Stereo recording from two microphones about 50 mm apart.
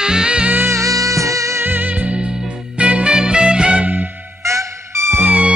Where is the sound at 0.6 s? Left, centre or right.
Right.